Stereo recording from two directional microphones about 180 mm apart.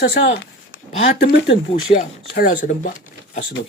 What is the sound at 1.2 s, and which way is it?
Speech, 70° left (ahead or behind).